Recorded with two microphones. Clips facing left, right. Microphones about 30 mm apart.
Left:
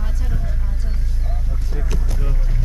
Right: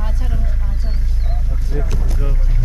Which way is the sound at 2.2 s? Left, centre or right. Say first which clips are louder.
Right 2 dB; centre.